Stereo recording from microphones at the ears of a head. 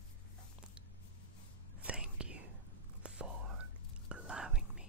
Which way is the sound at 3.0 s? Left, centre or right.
Right.